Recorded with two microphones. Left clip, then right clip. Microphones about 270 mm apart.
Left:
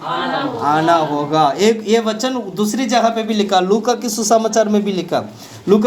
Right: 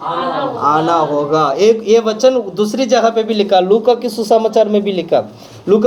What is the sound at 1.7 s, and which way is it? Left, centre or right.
Speech, left.